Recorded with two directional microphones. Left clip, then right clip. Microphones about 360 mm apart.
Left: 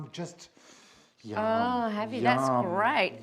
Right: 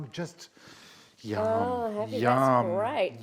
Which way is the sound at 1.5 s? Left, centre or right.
Centre.